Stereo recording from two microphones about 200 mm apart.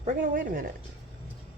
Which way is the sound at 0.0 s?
35° right (ahead or behind).